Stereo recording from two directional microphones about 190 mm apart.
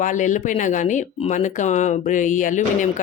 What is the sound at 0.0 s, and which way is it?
Speech, 40° left (ahead or behind).